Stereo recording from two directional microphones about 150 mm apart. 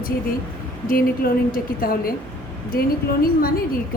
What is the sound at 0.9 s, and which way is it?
A woman's voice, 70° left (ahead or behind).